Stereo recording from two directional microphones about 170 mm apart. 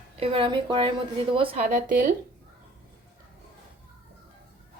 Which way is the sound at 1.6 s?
50° right (ahead or behind).